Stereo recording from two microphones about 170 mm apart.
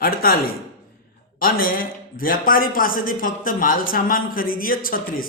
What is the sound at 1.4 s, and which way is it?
A man's voice, 55° left (ahead or behind).